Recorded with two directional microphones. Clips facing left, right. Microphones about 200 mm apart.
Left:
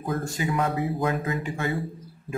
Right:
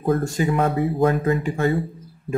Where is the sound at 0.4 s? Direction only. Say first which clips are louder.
Right 5 dB; 55° right (ahead or behind).